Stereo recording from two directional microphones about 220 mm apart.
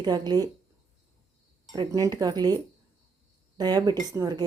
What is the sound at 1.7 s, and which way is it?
Speech, 20° right (ahead or behind).